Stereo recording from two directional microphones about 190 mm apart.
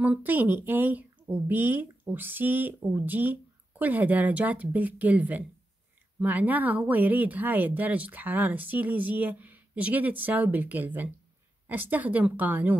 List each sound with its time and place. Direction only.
0.0 s speech: 10° right (ahead or behind)